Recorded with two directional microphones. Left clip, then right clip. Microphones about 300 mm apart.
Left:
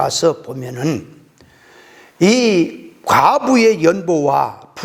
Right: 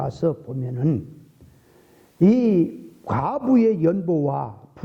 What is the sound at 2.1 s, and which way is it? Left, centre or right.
A man's voice, centre.